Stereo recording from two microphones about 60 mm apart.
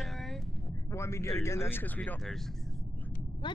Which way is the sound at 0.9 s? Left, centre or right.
Left.